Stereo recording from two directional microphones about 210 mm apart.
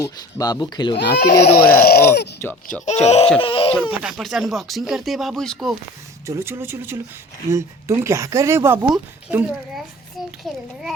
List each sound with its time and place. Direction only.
0.0 s speech: 15° left (ahead or behind)
0.9 s speech: 50° left (ahead or behind)
2.8 s speech: 30° left (ahead or behind)
4.0 s speech: centre (ahead or behind)
6.2 s speech: 10° right (ahead or behind)